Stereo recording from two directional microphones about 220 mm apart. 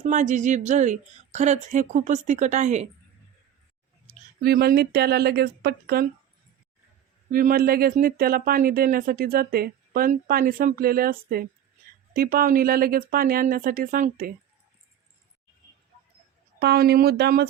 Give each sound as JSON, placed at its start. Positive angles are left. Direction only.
{"t": 0.0, "sound": "speech", "side_deg": -35}
{"t": 4.4, "sound": "speech", "side_deg": -45}
{"t": 7.3, "sound": "speech", "side_deg": -40}
{"t": 16.6, "sound": "speech", "side_deg": -45}